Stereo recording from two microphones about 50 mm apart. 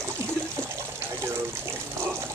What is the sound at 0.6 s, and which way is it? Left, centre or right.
Water, right.